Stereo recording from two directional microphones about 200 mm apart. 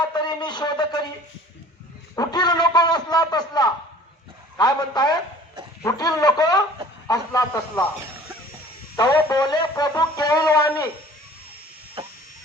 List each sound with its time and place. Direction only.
0.0 s a sound: 20° left (ahead or behind)
2.1 s music: 20° left (ahead or behind)
7.1 s speech: 15° left (ahead or behind)
9.0 s music: 20° left (ahead or behind)